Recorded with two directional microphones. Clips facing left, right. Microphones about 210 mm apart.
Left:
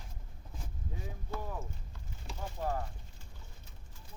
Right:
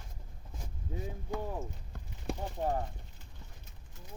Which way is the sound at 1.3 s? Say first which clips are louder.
Right 4 dB; 15° right (ahead or behind).